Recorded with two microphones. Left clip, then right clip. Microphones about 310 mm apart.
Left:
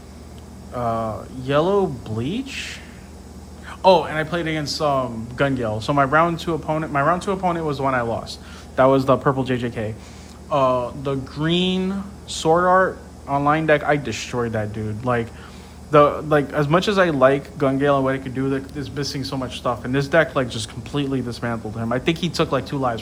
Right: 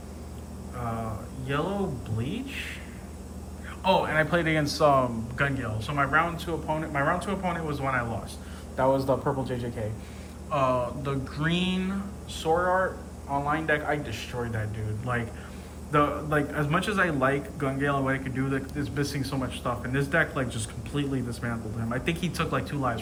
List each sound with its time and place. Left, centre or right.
0.8 s a man's voice: centre
2.1 s a man's voice: centre
10.5 s a man's voice: centre
13.5 s a man's voice: centre